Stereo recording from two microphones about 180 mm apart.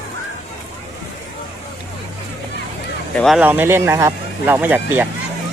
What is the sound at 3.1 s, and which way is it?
Speech, centre (ahead or behind).